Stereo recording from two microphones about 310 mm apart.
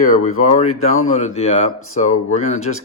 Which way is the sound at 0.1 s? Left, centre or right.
Left.